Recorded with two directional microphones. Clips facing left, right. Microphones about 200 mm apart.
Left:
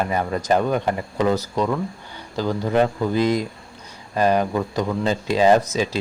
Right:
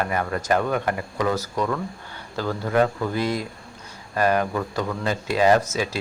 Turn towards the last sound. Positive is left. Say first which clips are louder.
# left 2 dB
turn(degrees=20)  # may be behind; listen again after turning